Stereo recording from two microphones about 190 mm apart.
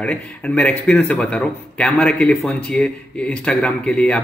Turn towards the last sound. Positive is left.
turn(degrees=5)  # may be behind; listen again after turning